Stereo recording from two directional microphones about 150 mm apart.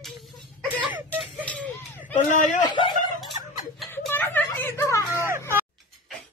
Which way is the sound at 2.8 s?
30° left (ahead or behind).